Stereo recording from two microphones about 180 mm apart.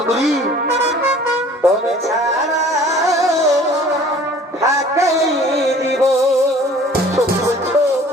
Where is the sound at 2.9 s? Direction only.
Centre (ahead or behind).